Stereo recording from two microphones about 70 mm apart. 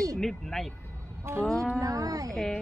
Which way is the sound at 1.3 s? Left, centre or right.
Right.